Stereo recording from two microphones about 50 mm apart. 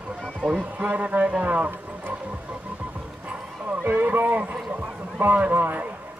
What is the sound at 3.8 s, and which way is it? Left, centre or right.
A man's voice, right.